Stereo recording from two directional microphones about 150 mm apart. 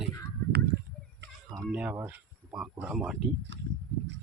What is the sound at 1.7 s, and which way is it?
Speech, 10° right (ahead or behind).